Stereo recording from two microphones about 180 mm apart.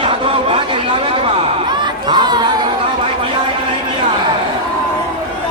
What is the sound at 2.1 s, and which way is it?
Crowd, 25° right (ahead or behind).